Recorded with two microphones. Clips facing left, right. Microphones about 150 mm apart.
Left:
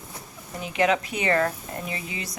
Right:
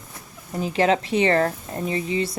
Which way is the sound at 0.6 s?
30° right (ahead or behind).